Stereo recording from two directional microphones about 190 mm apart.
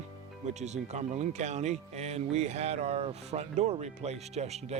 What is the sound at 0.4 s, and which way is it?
Speech, 35° right (ahead or behind).